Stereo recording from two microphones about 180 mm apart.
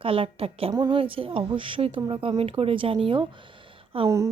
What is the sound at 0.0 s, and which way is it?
Speech, 30° right (ahead or behind).